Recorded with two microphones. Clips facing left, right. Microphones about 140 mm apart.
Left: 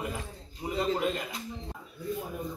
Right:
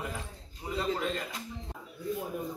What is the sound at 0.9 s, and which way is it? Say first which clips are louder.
Speech: left 3 dB; 15° left (ahead or behind).